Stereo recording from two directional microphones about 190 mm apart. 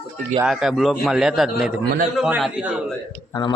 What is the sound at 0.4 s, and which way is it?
A man's voice, centre (ahead or behind).